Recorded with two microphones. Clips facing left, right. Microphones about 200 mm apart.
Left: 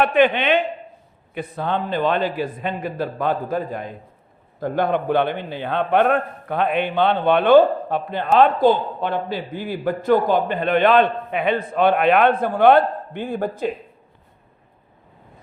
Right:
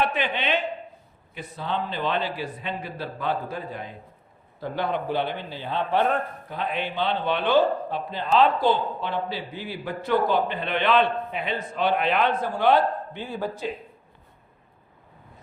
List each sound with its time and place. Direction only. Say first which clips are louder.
0.0 s a man's voice: left 9 dB; 60° left (ahead or behind)